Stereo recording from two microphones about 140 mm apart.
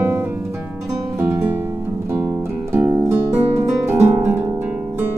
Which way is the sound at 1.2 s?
15° right (ahead or behind).